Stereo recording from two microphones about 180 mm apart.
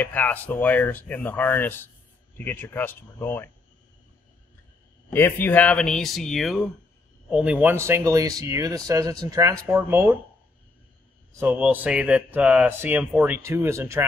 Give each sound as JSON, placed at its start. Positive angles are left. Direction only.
{"t": 0.0, "sound": "speech", "side_deg": 10}
{"t": 5.1, "sound": "speech", "side_deg": 10}
{"t": 11.3, "sound": "speech", "side_deg": -10}